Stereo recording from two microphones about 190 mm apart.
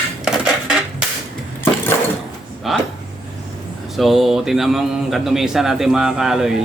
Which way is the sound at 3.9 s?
Centre (ahead or behind).